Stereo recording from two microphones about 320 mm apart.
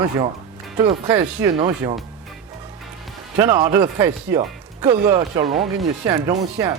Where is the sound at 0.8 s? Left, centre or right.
Centre.